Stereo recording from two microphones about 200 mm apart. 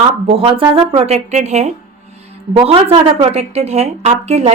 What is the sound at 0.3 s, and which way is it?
Speech, 25° right (ahead or behind).